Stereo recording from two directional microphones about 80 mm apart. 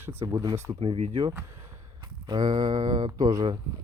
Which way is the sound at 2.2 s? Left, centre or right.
Right.